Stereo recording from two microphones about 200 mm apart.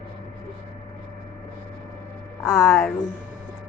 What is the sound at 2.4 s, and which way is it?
Speech, 15° left (ahead or behind).